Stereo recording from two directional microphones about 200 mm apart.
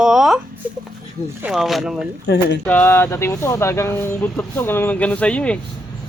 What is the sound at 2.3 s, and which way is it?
Speech, 55° left (ahead or behind).